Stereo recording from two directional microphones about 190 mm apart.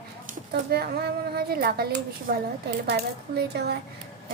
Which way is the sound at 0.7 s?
55° right (ahead or behind).